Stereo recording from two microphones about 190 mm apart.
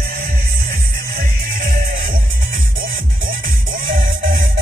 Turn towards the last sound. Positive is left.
turn(degrees=-25)  # may be behind; listen again after turning